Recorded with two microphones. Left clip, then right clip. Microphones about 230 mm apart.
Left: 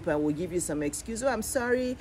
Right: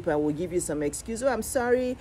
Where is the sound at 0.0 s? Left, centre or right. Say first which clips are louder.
Right 2 dB; centre.